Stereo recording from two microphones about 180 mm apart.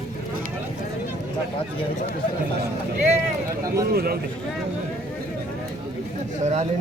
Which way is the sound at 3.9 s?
55° right (ahead or behind).